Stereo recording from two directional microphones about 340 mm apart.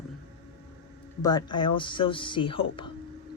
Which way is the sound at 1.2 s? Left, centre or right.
Centre.